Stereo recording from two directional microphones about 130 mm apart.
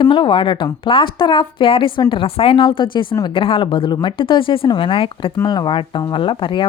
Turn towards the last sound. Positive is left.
turn(degrees=40)  # may be behind; listen again after turning